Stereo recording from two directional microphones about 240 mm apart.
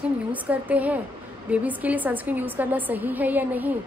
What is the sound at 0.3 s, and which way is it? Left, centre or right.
A woman's voice, centre.